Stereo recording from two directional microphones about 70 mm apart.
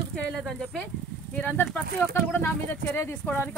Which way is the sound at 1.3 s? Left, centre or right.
Left.